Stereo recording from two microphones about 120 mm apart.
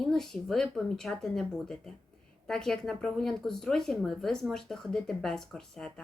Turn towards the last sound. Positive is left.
turn(degrees=5)  # may be behind; listen again after turning